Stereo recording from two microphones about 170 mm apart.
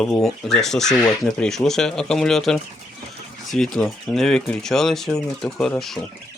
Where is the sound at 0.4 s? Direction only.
Centre (ahead or behind).